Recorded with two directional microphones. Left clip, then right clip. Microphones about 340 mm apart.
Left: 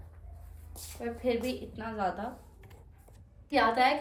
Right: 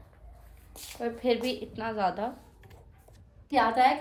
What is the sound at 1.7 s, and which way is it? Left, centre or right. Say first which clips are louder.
Speech: right 5 dB; centre.